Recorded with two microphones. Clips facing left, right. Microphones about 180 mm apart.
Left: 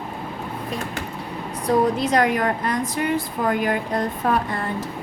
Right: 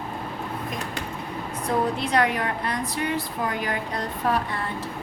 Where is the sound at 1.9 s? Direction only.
40° left (ahead or behind).